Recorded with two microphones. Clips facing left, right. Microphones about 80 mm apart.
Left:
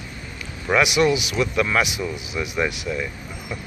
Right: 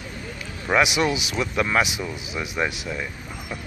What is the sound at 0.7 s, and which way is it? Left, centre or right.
Speech, right.